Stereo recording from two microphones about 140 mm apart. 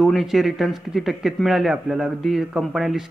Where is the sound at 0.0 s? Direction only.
Centre (ahead or behind).